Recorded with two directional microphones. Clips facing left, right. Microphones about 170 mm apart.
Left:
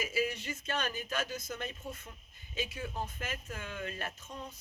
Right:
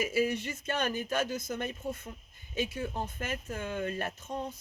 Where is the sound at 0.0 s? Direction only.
50° right (ahead or behind).